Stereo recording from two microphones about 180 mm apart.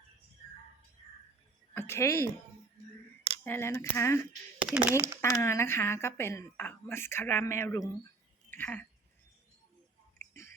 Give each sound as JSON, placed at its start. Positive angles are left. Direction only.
{"t": 1.7, "sound": "speech", "side_deg": 15}
{"t": 3.4, "sound": "a woman's voice", "side_deg": 15}
{"t": 4.6, "sound": "speech", "side_deg": -5}
{"t": 5.2, "sound": "a woman's voice", "side_deg": 15}
{"t": 8.4, "sound": "a sound", "side_deg": 10}